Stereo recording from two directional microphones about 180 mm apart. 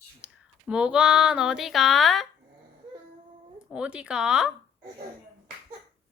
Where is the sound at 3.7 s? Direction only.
5° right (ahead or behind).